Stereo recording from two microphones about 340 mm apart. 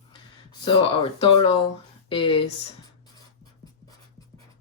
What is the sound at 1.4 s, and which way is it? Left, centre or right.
Speech, centre.